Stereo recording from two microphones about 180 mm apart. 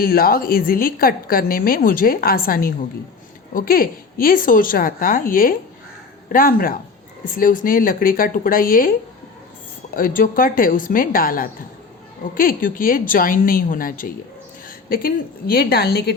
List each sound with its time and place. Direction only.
0.0 s a woman's voice: 55° left (ahead or behind)